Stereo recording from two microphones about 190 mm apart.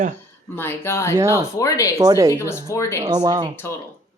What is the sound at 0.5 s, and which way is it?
Speech, 10° left (ahead or behind).